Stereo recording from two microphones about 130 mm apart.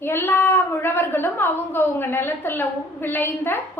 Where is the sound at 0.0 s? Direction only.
20° left (ahead or behind).